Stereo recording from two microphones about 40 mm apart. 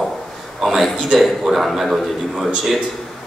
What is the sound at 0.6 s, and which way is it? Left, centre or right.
A man's voice, centre.